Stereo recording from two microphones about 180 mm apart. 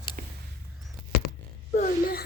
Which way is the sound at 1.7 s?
55° left (ahead or behind).